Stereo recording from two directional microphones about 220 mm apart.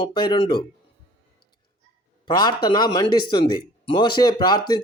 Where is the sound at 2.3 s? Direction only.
20° left (ahead or behind).